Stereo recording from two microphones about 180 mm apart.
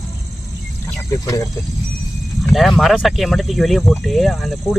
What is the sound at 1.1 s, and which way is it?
Speech, 20° left (ahead or behind).